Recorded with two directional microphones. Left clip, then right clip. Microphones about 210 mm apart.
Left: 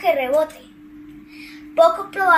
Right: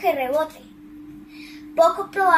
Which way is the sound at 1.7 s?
Centre (ahead or behind).